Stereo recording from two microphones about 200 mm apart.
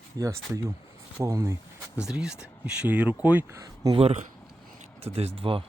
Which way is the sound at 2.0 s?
5° right (ahead or behind).